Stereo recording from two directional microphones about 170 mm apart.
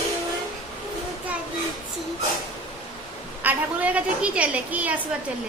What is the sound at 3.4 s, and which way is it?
A woman's voice, 10° right (ahead or behind).